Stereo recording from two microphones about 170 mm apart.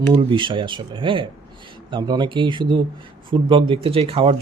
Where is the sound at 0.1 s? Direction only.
30° right (ahead or behind).